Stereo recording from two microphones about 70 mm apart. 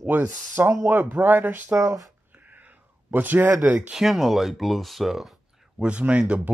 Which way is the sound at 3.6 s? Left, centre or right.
Right.